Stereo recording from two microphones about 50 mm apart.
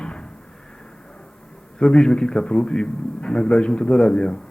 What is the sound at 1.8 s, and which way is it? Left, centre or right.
A man's voice, centre.